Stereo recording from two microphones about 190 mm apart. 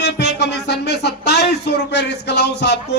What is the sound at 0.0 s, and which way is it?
Speech, 65° left (ahead or behind).